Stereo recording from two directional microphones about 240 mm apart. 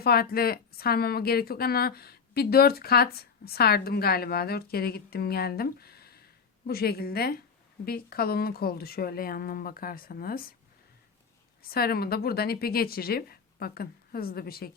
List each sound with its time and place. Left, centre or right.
0.0 s a woman's voice: left
11.6 s a woman's voice: left